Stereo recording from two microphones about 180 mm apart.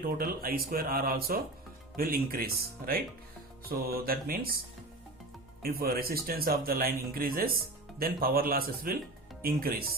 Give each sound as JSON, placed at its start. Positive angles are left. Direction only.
{"t": 0.0, "sound": "speech", "side_deg": -55}
{"t": 5.6, "sound": "speech", "side_deg": -55}